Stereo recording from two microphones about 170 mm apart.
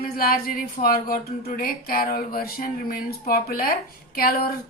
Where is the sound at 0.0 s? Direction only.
60° left (ahead or behind).